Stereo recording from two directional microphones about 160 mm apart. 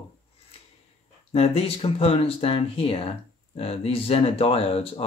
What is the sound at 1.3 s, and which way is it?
Speech, 40° left (ahead or behind).